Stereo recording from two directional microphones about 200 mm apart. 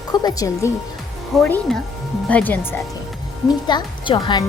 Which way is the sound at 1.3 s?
5° left (ahead or behind).